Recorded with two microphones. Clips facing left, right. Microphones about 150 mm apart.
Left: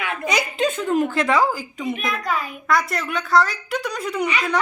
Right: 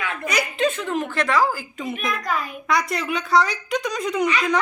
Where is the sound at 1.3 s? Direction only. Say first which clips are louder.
Right 2 dB; 25° left (ahead or behind).